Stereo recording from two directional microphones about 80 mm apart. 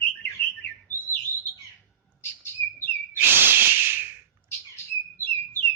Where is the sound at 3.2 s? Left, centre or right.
Right.